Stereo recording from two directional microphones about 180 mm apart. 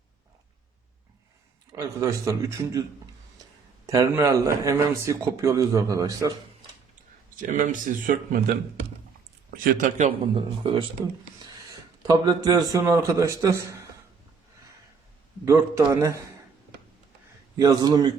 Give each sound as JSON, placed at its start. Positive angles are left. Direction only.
{"t": 1.7, "sound": "speech", "side_deg": -20}
{"t": 3.8, "sound": "speech", "side_deg": -20}
{"t": 7.3, "sound": "speech", "side_deg": -45}
{"t": 9.5, "sound": "speech", "side_deg": -50}
{"t": 10.3, "sound": "a man's voice", "side_deg": -30}
{"t": 15.4, "sound": "speech", "side_deg": -15}
{"t": 17.6, "sound": "a man's voice", "side_deg": -20}